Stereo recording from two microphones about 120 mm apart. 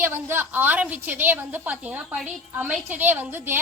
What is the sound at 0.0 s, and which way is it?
A woman's voice, 20° right (ahead or behind).